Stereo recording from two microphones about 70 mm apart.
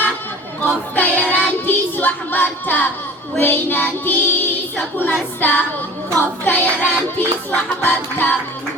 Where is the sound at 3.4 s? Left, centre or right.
Left.